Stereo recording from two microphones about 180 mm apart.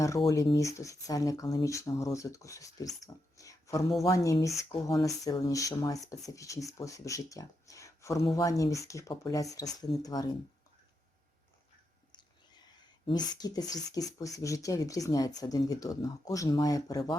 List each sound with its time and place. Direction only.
0.2 s speech: 25° left (ahead or behind)
3.3 s a sound: 20° left (ahead or behind)
4.0 s speech: 15° left (ahead or behind)
13.1 s speech: 20° left (ahead or behind)